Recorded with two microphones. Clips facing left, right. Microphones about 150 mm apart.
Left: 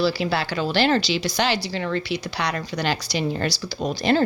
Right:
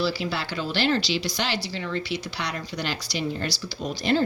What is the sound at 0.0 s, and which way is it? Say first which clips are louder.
Speech: left 5 dB; 75° left (ahead or behind).